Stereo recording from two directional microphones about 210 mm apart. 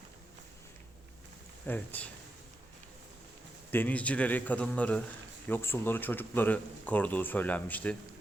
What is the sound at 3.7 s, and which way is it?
Speech, 5° left (ahead or behind).